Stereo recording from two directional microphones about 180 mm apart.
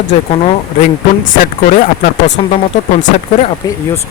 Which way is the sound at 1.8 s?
50° left (ahead or behind).